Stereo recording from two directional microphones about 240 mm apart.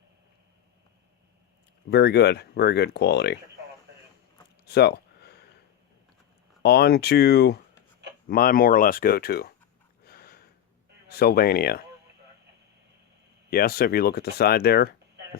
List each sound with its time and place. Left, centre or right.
1.9 s speech: left
4.6 s a sound: left
6.6 s speech: left
10.1 s a sound: left
11.1 s speech: left
13.5 s speech: left